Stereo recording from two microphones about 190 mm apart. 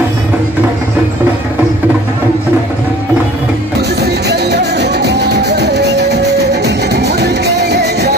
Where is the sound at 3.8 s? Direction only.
60° right (ahead or behind).